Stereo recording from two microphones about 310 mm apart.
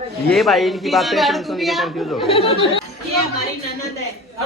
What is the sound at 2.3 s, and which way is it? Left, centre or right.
Speech, centre.